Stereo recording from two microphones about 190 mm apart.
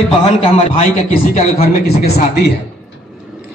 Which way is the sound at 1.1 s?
50° left (ahead or behind).